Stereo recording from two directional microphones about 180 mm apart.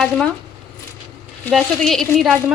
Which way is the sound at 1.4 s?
Centre (ahead or behind).